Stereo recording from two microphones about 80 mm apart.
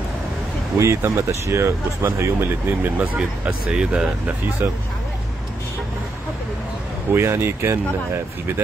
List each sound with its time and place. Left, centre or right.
0.7 s speech: right
3.2 s speech: centre
7.2 s speech: right